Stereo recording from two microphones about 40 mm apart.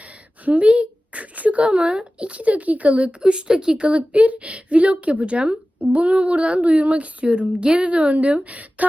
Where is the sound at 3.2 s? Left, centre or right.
Right.